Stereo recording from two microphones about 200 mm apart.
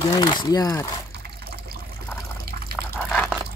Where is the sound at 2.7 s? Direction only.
5° left (ahead or behind).